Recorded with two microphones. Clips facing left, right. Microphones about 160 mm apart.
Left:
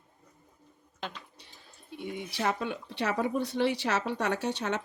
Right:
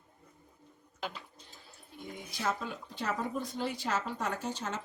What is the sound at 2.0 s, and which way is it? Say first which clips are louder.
Speech: left 6 dB; 70° left (ahead or behind).